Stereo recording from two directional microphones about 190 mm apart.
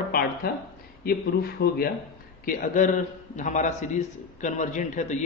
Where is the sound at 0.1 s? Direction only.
50° left (ahead or behind).